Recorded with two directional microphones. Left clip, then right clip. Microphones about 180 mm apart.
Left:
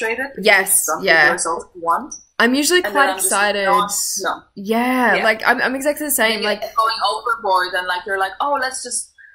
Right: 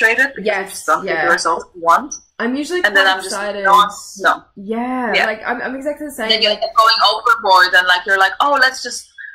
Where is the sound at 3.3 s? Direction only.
15° left (ahead or behind).